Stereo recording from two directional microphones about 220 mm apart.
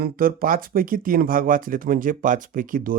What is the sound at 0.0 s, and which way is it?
Speech, 40° right (ahead or behind).